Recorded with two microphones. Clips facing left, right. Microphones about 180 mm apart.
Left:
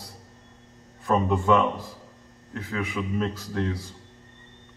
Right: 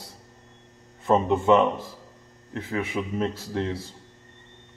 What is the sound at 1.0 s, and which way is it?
Speech, 20° right (ahead or behind).